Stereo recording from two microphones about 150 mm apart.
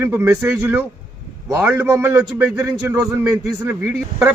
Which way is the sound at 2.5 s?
20° right (ahead or behind).